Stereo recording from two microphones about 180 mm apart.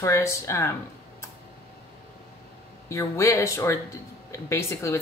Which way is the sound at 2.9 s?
15° left (ahead or behind).